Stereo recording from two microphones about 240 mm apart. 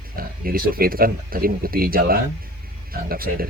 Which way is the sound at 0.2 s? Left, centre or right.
Right.